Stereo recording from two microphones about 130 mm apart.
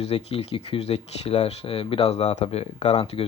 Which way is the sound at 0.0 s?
55° left (ahead or behind).